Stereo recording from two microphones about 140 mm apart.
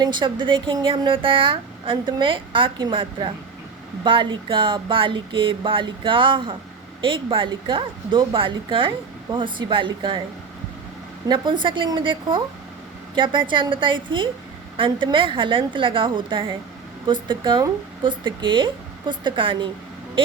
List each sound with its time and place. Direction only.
0.0 s a woman's voice: 30° right (ahead or behind)
11.3 s a woman's voice: 35° right (ahead or behind)